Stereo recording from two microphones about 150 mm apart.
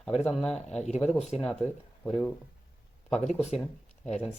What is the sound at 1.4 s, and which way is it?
Speech, 5° left (ahead or behind).